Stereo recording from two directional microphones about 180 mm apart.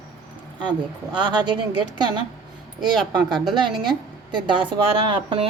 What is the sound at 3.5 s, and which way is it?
A woman's voice, 25° right (ahead or behind).